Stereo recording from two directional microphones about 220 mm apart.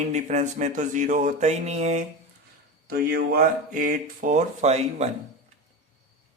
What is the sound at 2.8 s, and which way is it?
Speech, 45° right (ahead or behind).